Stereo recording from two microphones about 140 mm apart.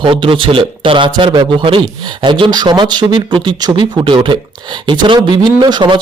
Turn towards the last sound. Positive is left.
turn(degrees=-30)  # may be behind; listen again after turning